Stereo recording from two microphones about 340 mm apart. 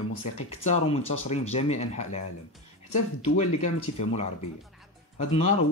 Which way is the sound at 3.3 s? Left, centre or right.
Centre.